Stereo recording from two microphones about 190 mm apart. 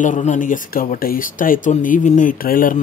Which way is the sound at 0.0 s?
40° left (ahead or behind).